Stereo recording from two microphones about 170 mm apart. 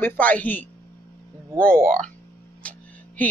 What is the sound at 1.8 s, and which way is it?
Speech, 50° right (ahead or behind).